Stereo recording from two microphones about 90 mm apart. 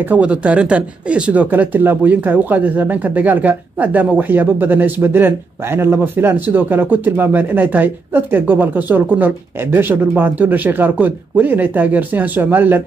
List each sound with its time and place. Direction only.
0.1 s speech: 15° right (ahead or behind)